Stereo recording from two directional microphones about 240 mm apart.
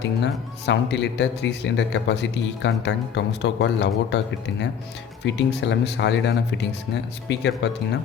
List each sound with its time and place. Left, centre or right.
0.0 s speech: left
5.2 s speech: left